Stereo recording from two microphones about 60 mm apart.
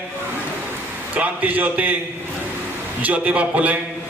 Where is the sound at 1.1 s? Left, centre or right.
Right.